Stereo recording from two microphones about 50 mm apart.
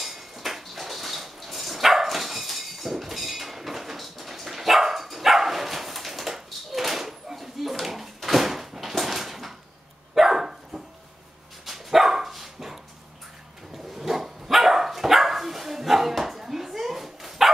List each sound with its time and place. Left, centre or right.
0.0 s dog: centre
13.9 s dog: centre